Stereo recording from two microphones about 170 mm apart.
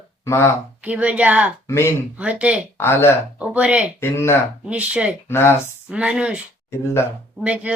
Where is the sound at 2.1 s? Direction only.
10° right (ahead or behind).